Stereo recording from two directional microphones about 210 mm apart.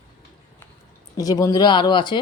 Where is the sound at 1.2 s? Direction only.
15° left (ahead or behind).